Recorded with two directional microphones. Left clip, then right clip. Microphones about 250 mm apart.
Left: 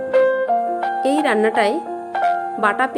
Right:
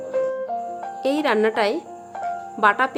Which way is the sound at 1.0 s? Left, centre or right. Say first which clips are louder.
Left 1 dB; centre.